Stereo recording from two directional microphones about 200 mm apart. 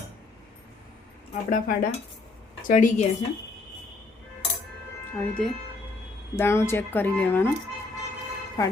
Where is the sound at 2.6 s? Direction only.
40° left (ahead or behind).